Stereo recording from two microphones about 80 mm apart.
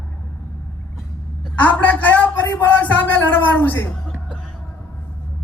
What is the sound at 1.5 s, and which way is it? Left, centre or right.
A man's voice, centre.